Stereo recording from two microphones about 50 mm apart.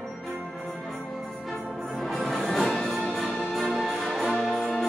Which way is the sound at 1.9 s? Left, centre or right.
Centre.